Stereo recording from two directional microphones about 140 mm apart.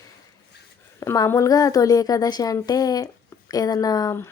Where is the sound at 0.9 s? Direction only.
25° left (ahead or behind).